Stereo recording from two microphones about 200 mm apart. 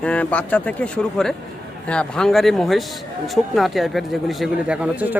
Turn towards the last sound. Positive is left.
turn(degrees=-5)  # may be behind; listen again after turning